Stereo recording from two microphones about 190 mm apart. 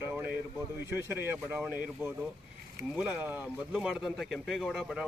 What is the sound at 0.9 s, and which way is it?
Speech, 10° right (ahead or behind).